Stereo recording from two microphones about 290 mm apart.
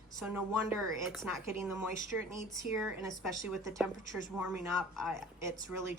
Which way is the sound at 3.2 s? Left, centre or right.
Centre.